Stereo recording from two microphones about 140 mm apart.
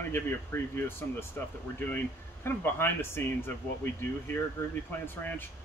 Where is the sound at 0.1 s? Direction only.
15° left (ahead or behind).